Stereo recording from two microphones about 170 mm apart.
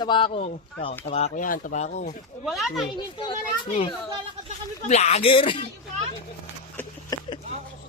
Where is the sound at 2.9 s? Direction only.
25° left (ahead or behind).